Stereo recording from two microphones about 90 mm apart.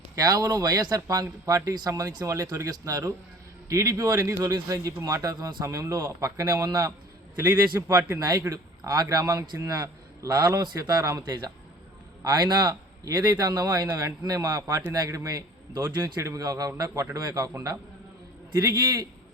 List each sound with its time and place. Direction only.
0.2 s a man's voice: 45° right (ahead or behind); by 8.2 s 25° right (ahead or behind)
8.3 s a man's voice: 40° right (ahead or behind); by 10.8 s 55° right (ahead or behind)
10.8 s speech: 45° right (ahead or behind)
12.2 s a man's voice: 45° right (ahead or behind); by 19.0 s 30° right (ahead or behind)